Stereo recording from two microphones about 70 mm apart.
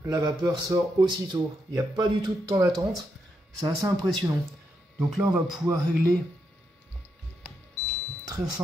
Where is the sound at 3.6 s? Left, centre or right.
Right.